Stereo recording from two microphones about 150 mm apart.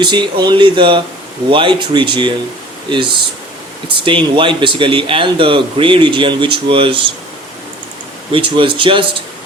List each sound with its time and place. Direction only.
0.0 s speech: 30° right (ahead or behind)
8.3 s speech: 35° right (ahead or behind)